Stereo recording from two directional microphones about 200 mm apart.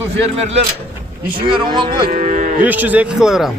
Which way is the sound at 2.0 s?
40° right (ahead or behind).